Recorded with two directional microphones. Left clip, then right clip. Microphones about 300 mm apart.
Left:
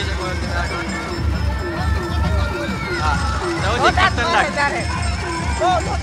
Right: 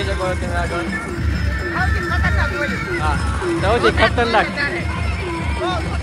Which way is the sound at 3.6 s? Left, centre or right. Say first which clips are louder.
Even; centre.